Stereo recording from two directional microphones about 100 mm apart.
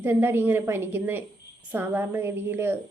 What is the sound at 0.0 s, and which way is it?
Speech, 20° right (ahead or behind).